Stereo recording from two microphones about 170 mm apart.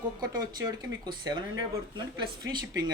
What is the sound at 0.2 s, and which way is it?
Speech, 25° right (ahead or behind).